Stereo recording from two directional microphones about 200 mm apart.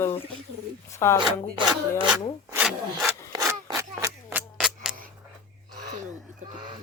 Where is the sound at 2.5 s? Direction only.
5° right (ahead or behind).